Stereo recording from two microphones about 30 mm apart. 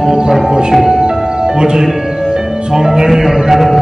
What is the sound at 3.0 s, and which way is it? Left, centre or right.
Music, centre.